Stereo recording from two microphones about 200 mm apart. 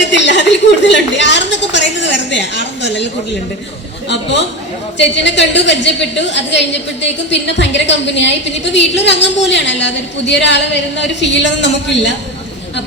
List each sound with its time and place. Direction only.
0.0 s a woman's voice: 60° left (ahead or behind)
4.1 s a woman's voice: 60° left (ahead or behind)